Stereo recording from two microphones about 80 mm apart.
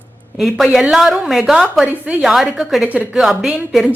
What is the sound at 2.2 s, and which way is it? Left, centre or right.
Speech, centre.